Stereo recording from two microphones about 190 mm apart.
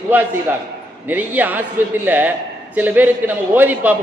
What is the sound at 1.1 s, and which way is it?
A man's voice, 10° right (ahead or behind).